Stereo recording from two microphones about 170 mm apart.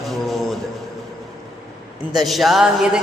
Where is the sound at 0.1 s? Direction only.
Centre (ahead or behind).